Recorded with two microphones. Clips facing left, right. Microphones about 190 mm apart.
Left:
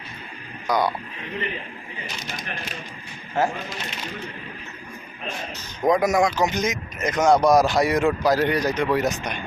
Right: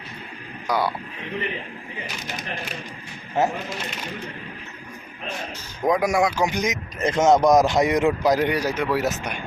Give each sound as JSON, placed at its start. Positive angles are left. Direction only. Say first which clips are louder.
{"t": 0.7, "sound": "speech", "louder": "left 1 dB", "side_deg": -10}
{"t": 3.4, "sound": "speech", "louder": "right 1 dB", "side_deg": -20}
{"t": 5.8, "sound": "speech", "louder": "left 1 dB", "side_deg": -5}
{"t": 7.0, "sound": "speech", "louder": "right 1 dB", "side_deg": -25}